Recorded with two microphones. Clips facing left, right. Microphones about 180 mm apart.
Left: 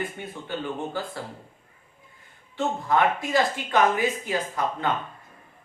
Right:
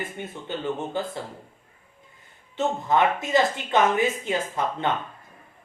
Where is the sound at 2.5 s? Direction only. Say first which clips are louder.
Right 1 dB; 20° right (ahead or behind).